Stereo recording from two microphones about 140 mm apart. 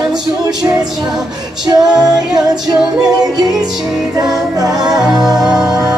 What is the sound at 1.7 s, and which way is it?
Music, 25° right (ahead or behind).